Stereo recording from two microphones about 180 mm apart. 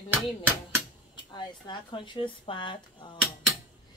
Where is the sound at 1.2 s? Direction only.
25° left (ahead or behind).